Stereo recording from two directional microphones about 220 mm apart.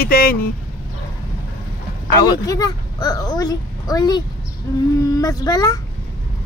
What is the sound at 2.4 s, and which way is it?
A woman's voice, 15° left (ahead or behind).